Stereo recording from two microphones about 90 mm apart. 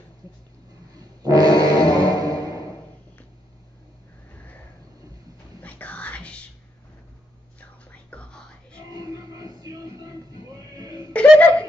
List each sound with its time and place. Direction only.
0.9 s music: 45° right (ahead or behind)
5.6 s whispering: 15° left (ahead or behind)
7.9 s whispering: 15° left (ahead or behind)
8.9 s music: 45° right (ahead or behind)
11.1 s chuckle: 15° left (ahead or behind)